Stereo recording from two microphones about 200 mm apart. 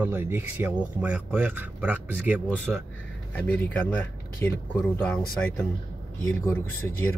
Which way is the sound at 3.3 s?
5° left (ahead or behind).